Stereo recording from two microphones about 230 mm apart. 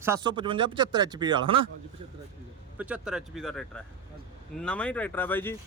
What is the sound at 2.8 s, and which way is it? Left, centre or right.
Speech, centre.